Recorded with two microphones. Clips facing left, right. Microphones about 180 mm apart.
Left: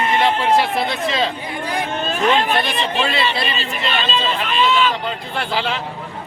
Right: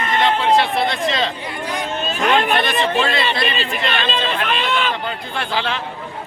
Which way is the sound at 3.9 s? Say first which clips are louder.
Left 2 dB; 55° right (ahead or behind).